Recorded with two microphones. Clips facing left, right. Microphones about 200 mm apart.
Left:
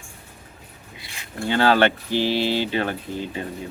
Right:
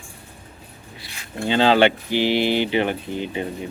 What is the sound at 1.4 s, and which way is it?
Speech, 20° right (ahead or behind).